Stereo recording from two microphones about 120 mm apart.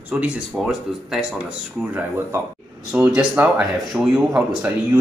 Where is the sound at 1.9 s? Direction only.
20° right (ahead or behind).